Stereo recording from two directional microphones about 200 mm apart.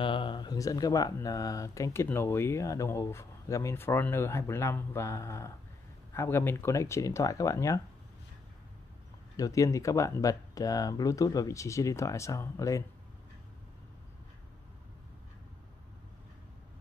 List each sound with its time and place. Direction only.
0.0 s speech: 25° left (ahead or behind)
9.4 s speech: 15° left (ahead or behind)